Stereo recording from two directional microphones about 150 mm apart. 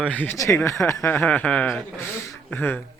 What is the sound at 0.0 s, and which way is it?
Speech, 10° left (ahead or behind).